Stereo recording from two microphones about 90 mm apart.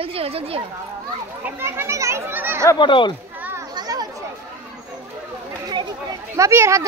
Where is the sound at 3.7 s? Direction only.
45° right (ahead or behind).